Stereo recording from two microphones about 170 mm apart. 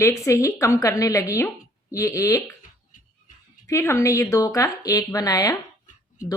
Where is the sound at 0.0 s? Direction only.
20° left (ahead or behind).